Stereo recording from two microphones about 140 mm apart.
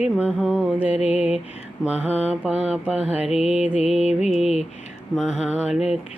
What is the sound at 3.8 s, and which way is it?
Music, 50° left (ahead or behind).